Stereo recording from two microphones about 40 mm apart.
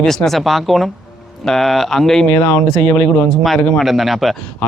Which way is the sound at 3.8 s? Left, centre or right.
Centre.